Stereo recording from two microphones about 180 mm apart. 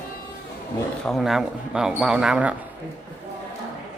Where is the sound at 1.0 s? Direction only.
Centre (ahead or behind).